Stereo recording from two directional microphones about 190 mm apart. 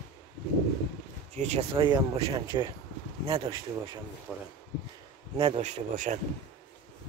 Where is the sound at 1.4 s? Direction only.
35° right (ahead or behind).